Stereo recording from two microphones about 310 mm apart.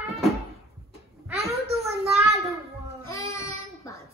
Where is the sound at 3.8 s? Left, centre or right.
Centre.